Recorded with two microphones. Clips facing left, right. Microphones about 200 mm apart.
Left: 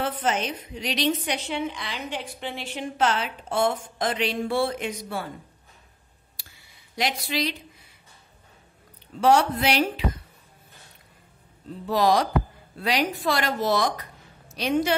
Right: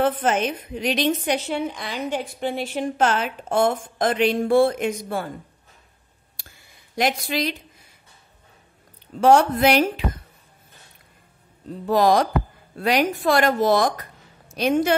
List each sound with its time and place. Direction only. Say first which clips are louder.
0.0 s a woman's voice: right 6 dB; 55° right (ahead or behind)
7.0 s a woman's voice: right 4 dB; 50° right (ahead or behind)
9.2 s a woman's voice: right 4 dB; 50° right (ahead or behind)
11.8 s a woman's voice: right 4 dB; 50° right (ahead or behind)